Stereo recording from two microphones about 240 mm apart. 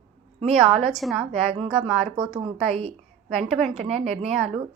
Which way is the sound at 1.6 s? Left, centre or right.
Right.